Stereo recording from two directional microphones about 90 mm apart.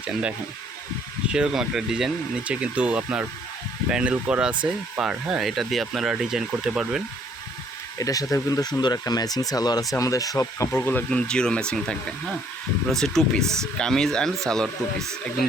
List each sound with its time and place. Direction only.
0.0 s speech: 10° right (ahead or behind)
7.9 s speech: 40° left (ahead or behind)
10.7 s speech: 25° left (ahead or behind)
11.1 s speech: 10° left (ahead or behind)
12.9 s speech: 5° left (ahead or behind)